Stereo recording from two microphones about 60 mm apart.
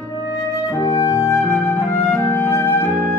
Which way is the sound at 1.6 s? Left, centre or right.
Left.